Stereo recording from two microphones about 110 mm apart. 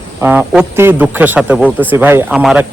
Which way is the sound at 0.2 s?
15° right (ahead or behind).